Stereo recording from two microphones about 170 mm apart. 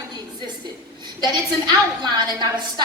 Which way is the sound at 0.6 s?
25° right (ahead or behind).